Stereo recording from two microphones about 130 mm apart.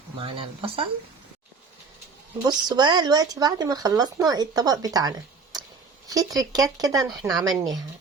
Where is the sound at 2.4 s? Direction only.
30° right (ahead or behind).